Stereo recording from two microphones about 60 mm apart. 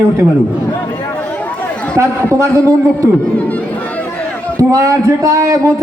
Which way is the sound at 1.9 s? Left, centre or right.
Right.